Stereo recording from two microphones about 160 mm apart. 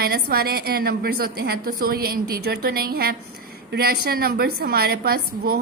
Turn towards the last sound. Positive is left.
turn(degrees=-70)  # may be behind; listen again after turning